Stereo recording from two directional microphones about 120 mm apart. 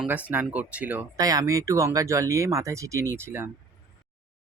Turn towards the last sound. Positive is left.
turn(degrees=-20)  # may be behind; listen again after turning